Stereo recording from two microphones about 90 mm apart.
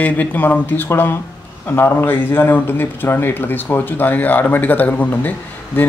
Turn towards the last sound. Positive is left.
turn(degrees=20)  # may be behind; listen again after turning